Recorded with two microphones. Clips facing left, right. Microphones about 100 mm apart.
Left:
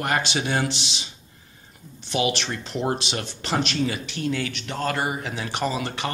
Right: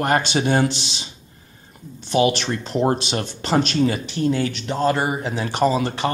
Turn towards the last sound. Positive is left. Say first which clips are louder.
# right 7 dB
turn(degrees=-35)  # may be behind; listen again after turning